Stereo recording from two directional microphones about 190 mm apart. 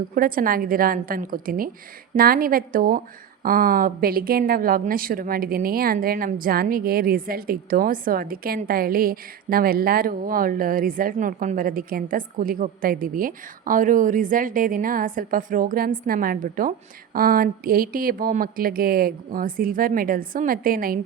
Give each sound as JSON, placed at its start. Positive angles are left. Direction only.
{"t": 0.1, "sound": "a woman's voice", "side_deg": -50}